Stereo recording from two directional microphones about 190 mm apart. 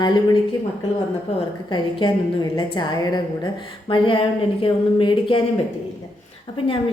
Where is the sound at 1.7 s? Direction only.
25° left (ahead or behind).